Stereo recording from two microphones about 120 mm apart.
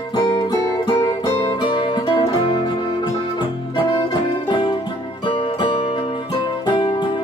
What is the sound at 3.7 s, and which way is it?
Music, 40° left (ahead or behind).